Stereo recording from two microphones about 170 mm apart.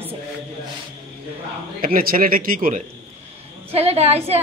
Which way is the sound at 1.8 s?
55° right (ahead or behind).